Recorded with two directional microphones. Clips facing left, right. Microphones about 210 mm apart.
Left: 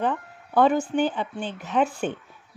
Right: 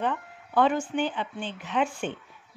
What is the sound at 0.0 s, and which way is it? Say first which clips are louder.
Speech: left 3 dB; 40° left (ahead or behind).